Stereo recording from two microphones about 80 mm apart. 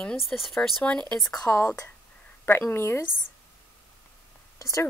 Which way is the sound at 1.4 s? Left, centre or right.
Left.